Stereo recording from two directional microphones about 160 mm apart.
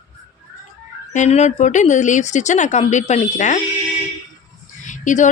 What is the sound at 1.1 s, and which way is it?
A woman's voice, 45° left (ahead or behind).